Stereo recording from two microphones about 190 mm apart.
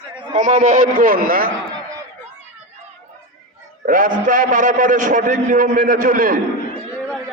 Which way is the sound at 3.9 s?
45° right (ahead or behind).